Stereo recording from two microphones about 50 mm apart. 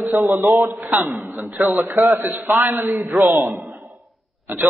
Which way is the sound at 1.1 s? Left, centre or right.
Right.